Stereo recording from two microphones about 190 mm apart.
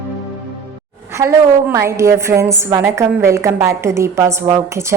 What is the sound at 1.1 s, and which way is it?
A woman's voice, 15° right (ahead or behind).